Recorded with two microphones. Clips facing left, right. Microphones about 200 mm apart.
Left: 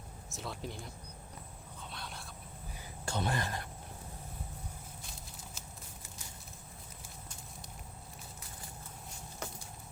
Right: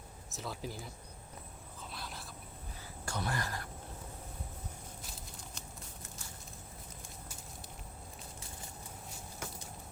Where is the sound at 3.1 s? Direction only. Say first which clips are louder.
Left 3 dB; 25° left (ahead or behind).